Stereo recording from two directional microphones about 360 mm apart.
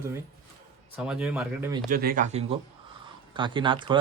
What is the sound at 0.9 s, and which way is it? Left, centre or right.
Speech, centre.